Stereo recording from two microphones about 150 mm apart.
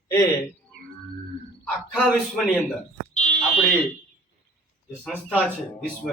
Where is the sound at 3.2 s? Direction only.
50° left (ahead or behind).